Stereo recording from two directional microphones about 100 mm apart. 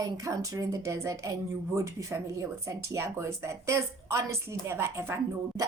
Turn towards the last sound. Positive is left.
turn(degrees=-25)  # may be behind; listen again after turning